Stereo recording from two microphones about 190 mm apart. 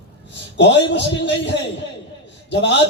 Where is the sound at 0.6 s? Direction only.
70° left (ahead or behind).